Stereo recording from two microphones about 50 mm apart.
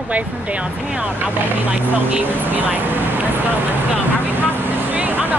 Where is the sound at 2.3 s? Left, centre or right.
Right.